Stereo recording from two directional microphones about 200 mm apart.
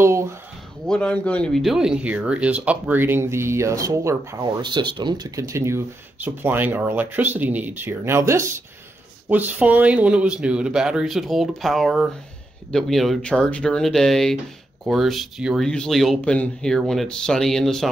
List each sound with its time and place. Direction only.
0.0 s speech: 15° right (ahead or behind)
0.8 s speech: 5° left (ahead or behind)